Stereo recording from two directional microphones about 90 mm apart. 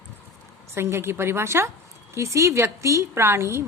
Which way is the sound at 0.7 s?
30° right (ahead or behind).